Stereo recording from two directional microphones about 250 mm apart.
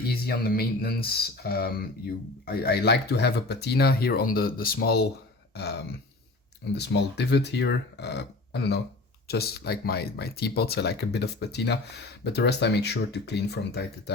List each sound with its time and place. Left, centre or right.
0.1 s speech: left
6.7 s speech: left